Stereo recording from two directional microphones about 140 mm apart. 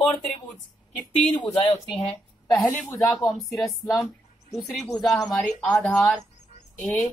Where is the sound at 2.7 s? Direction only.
10° left (ahead or behind).